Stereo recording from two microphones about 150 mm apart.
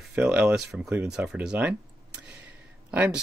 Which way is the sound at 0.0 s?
5° right (ahead or behind).